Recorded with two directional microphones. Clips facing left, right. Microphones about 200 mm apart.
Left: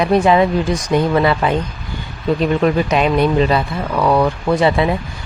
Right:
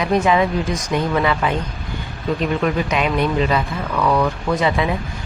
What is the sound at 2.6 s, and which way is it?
Speech, 35° left (ahead or behind).